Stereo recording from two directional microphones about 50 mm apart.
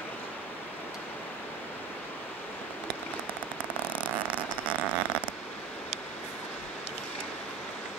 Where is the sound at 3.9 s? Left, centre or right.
Right.